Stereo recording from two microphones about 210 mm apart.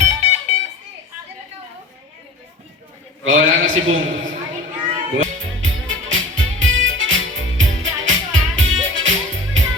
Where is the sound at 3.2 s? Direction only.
65° right (ahead or behind).